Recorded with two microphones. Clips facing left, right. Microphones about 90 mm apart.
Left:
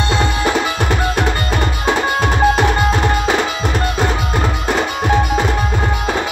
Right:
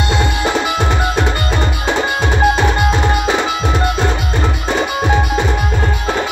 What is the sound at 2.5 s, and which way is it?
Tabla, centre (ahead or behind).